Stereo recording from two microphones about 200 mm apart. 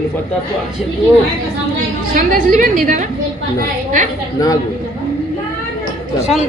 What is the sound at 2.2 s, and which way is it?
Speech, 40° right (ahead or behind).